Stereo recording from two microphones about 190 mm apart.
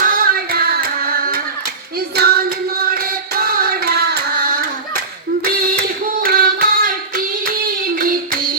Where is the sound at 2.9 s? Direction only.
50° right (ahead or behind).